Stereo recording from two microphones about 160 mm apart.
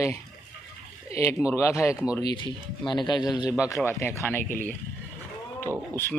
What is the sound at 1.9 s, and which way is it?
Speech, 5° right (ahead or behind).